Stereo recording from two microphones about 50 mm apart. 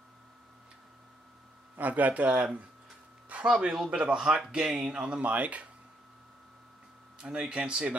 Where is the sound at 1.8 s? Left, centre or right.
Right.